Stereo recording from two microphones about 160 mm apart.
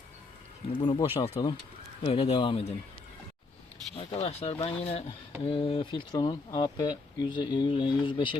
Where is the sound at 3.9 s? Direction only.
40° left (ahead or behind).